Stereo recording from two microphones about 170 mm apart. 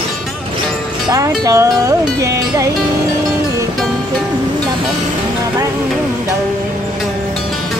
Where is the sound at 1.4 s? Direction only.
20° right (ahead or behind).